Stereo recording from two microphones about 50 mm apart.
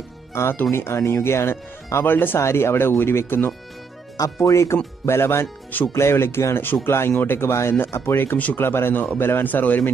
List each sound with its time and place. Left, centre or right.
0.3 s speech: left
2.3 s speech: left
4.4 s speech: left
5.0 s speech: left
7.3 s a man's voice: left